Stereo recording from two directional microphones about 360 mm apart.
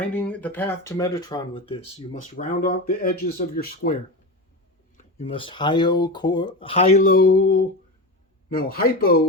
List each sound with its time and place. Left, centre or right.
0.1 s speech: centre; by 3.9 s left
5.2 s speech: centre